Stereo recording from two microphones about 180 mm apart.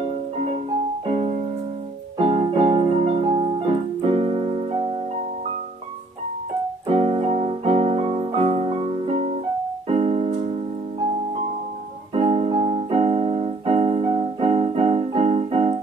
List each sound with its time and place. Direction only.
1.0 s music: 35° right (ahead or behind)
6.9 s keyboard: 35° right (ahead or behind)
9.8 s music: 35° right (ahead or behind)
12.1 s keyboard: 35° right (ahead or behind)